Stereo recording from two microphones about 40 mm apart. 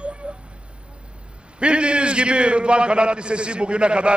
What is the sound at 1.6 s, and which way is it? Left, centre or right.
A man's voice, right.